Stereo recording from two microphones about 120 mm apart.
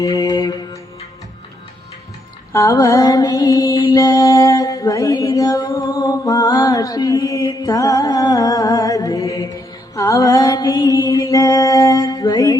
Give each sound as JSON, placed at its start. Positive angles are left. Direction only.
{"t": 0.0, "sound": "music", "side_deg": 30}
{"t": 2.5, "sound": "mantra", "side_deg": 25}
{"t": 3.9, "sound": "a sound", "side_deg": 40}
{"t": 9.9, "sound": "mantra", "side_deg": 25}